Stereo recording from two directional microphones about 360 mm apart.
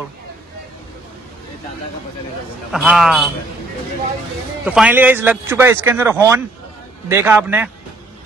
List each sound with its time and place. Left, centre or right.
2.7 s speech: centre
4.6 s speech: centre